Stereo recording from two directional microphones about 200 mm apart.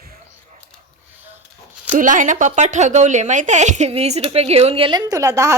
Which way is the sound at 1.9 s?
40° right (ahead or behind).